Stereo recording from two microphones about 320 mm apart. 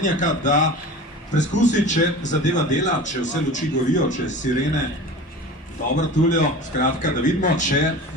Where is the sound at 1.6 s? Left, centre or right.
Left.